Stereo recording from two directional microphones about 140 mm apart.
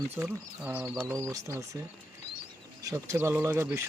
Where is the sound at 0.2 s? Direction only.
10° right (ahead or behind).